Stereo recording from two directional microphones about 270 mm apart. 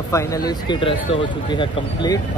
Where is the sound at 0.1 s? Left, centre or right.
Centre.